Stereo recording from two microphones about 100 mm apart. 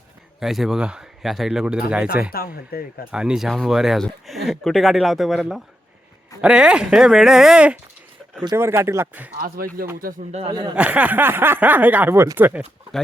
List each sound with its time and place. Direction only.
0.3 s speech: 5° right (ahead or behind)
8.5 s speech: 25° right (ahead or behind)
10.5 s speech: 45° right (ahead or behind)
10.8 s speech: 15° right (ahead or behind)